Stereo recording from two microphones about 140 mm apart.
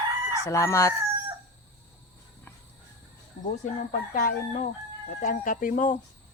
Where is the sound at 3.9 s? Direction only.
80° left.